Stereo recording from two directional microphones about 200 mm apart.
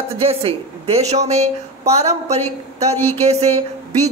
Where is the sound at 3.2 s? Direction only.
30° right (ahead or behind).